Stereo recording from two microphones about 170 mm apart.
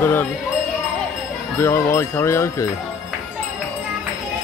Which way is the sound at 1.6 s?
15° left (ahead or behind).